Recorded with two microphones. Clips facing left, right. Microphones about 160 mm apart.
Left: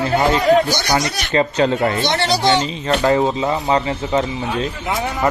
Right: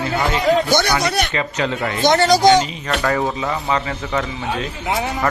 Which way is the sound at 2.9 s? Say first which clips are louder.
Left 6 dB; 25° left (ahead or behind).